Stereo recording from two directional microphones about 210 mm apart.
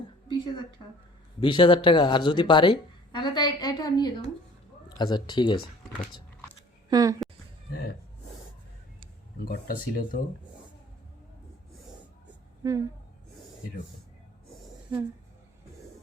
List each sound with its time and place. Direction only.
0.3 s a sound: 20° left (ahead or behind)
1.4 s speech: 25° left (ahead or behind)
6.9 s speech: 15° right (ahead or behind)
7.7 s gasp: 45° left (ahead or behind)
9.4 s speech: 45° left (ahead or behind)
12.6 s speech: 15° right (ahead or behind)